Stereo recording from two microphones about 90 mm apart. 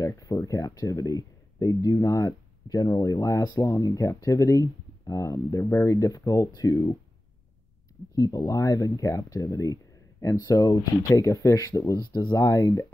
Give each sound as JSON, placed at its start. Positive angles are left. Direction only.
{"t": 0.0, "sound": "speech", "side_deg": 40}
{"t": 8.1, "sound": "speech", "side_deg": 40}
{"t": 12.4, "sound": "speech", "side_deg": 35}